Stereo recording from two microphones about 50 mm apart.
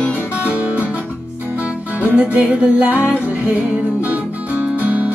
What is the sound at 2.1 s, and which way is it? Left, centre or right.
Music, right.